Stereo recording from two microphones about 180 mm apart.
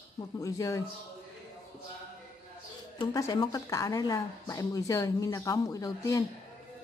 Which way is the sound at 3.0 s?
20° left (ahead or behind).